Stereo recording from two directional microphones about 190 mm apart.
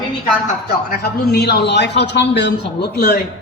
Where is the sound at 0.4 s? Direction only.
50° left (ahead or behind).